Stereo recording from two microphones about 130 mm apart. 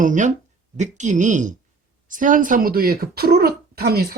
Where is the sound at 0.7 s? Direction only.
65° right (ahead or behind).